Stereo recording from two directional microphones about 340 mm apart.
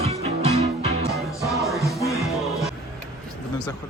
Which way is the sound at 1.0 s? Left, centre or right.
Centre.